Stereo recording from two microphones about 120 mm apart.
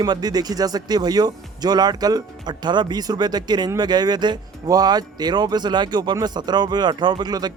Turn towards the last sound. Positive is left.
turn(degrees=-35)  # may be behind; listen again after turning